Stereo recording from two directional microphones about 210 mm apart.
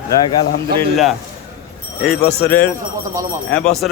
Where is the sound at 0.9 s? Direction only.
Centre (ahead or behind).